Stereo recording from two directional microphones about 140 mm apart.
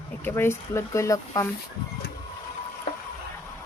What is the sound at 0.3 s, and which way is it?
Speech, 15° left (ahead or behind).